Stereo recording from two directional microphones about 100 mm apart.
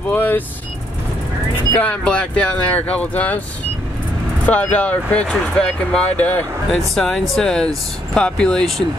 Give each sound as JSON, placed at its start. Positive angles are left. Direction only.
{"t": 0.1, "sound": "speech", "side_deg": 20}
{"t": 1.8, "sound": "speech", "side_deg": 15}
{"t": 4.5, "sound": "speech", "side_deg": 15}
{"t": 6.7, "sound": "speech", "side_deg": 5}